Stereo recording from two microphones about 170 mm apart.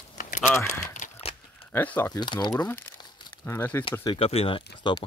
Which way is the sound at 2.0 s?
25° left (ahead or behind).